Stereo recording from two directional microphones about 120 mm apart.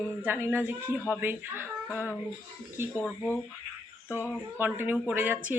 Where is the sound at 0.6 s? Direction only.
10° right (ahead or behind).